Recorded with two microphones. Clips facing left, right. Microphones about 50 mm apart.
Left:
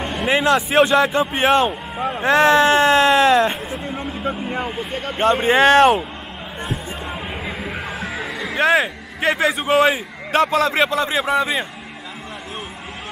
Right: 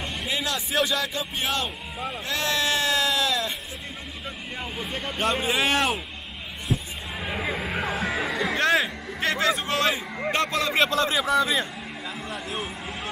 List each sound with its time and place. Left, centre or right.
0.0 s speech: left
7.3 s a sound: centre
8.6 s a man's voice: centre; by 11.6 s left